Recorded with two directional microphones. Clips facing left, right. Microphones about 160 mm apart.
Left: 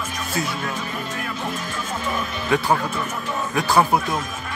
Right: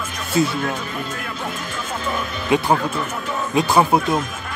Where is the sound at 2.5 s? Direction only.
20° right (ahead or behind).